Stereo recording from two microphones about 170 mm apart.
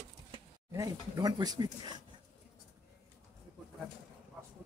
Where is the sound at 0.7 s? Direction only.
20° right (ahead or behind).